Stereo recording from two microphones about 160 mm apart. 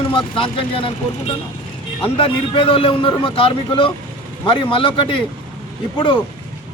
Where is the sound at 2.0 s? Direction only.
35° left (ahead or behind).